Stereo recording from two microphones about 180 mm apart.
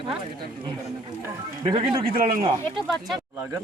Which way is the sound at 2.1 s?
50° right (ahead or behind).